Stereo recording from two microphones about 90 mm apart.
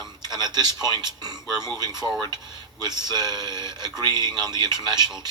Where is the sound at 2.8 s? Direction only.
50° right (ahead or behind).